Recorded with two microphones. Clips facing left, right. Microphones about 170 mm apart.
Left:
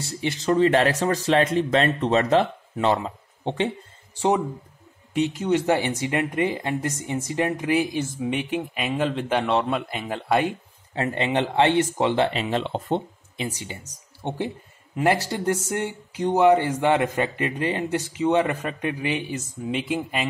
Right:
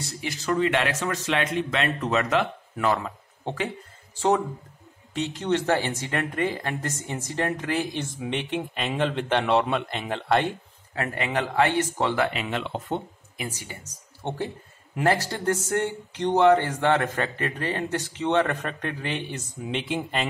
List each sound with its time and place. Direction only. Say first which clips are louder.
0.1 s speech: left 5 dB; 30° left (ahead or behind)
5.1 s speech: left 4 dB; 10° left (ahead or behind)
11.0 s speech: left 4 dB; 25° left (ahead or behind)
12.3 s speech: left 4 dB; 30° left (ahead or behind)
14.2 s speech: left 2 dB; 15° left (ahead or behind)